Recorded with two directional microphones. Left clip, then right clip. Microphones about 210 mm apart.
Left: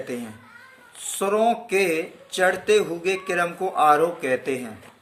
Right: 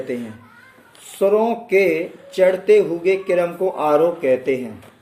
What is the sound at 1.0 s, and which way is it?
Speech, 40° left (ahead or behind).